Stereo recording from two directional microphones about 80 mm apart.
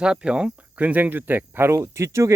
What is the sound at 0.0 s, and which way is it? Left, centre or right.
Speech, centre.